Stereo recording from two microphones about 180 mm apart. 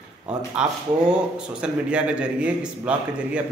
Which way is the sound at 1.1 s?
5° right (ahead or behind).